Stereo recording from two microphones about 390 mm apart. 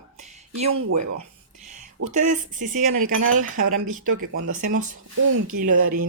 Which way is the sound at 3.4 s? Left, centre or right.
Right.